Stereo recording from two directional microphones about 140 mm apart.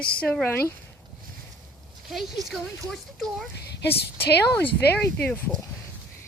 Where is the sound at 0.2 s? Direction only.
10° left (ahead or behind).